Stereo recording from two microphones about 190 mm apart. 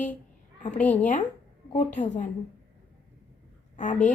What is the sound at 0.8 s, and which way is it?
Speech, 10° left (ahead or behind).